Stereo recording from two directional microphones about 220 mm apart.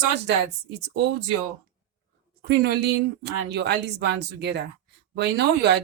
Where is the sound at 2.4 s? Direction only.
50° right (ahead or behind).